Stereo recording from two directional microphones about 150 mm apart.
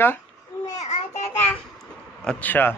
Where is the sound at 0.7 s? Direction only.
50° left (ahead or behind).